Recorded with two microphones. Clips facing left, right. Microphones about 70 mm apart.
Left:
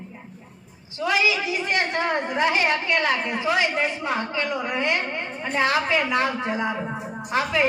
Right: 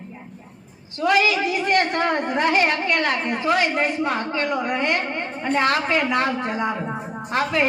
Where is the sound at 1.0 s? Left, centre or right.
Right.